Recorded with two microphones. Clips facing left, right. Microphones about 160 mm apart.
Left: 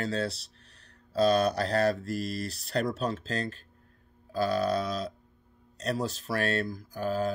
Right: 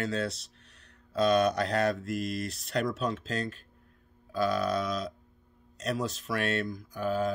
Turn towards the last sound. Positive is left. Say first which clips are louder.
# even
turn(degrees=35)  # may be behind; listen again after turning